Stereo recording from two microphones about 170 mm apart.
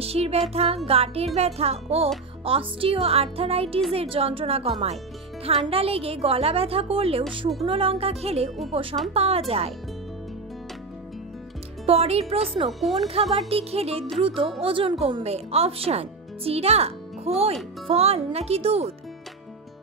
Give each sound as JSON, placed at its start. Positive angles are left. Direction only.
{"t": 0.0, "sound": "speech", "side_deg": -35}
{"t": 11.8, "sound": "speech", "side_deg": -35}
{"t": 12.6, "sound": "speech", "side_deg": 0}
{"t": 13.5, "sound": "speech", "side_deg": -35}